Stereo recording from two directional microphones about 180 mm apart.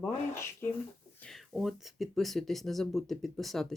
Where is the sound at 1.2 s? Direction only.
Centre (ahead or behind).